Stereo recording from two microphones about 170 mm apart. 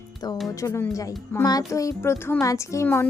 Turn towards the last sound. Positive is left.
turn(degrees=15)  # may be behind; listen again after turning